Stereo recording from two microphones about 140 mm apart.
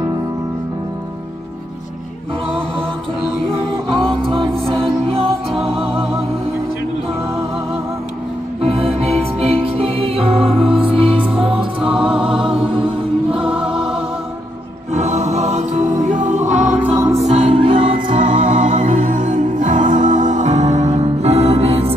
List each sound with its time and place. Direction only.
3.9 s music: centre (ahead or behind)
4.2 s music: 35° right (ahead or behind)
8.6 s music: 45° right (ahead or behind)
11.2 s music: 5° right (ahead or behind)
12.6 s mantra: 40° right (ahead or behind)
15.0 s music: 55° right (ahead or behind)
16.9 s music: 20° right (ahead or behind)
17.3 s music: 45° right (ahead or behind)
18.4 s music: 65° right (ahead or behind); by 21.9 s 45° right (ahead or behind)